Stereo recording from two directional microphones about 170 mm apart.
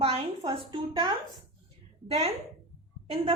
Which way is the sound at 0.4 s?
25° right (ahead or behind).